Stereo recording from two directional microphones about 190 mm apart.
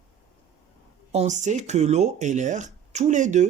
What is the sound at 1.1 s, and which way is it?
Speech, 35° right (ahead or behind).